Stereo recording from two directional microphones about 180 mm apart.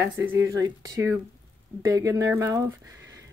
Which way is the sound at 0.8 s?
20° right (ahead or behind).